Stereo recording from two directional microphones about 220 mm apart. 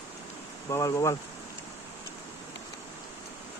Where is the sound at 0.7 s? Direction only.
15° left (ahead or behind).